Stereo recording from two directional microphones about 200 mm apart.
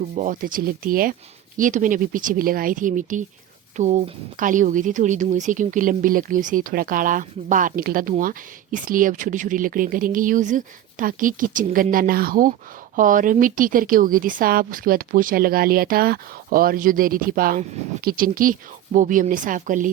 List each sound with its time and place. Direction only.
0.2 s speech: 40° right (ahead or behind)